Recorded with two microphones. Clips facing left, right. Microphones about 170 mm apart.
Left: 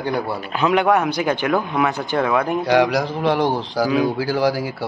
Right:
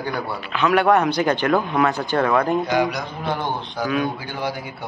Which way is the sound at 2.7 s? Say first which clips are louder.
Left 5 dB; 80° left.